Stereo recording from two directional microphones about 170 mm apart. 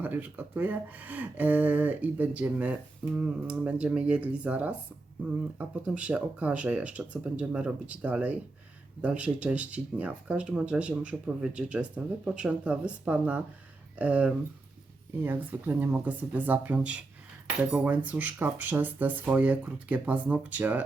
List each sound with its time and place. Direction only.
0.0 s speech: 10° right (ahead or behind)